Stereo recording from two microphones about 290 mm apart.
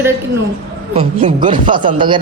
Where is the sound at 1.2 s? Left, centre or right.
Centre.